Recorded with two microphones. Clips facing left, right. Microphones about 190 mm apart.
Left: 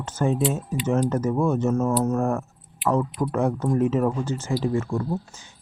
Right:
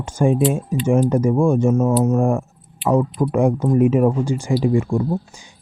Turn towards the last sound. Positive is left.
turn(degrees=-15)  # may be behind; listen again after turning